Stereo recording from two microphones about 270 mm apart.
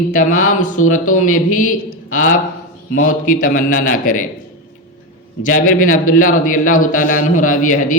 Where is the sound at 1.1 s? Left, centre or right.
Left.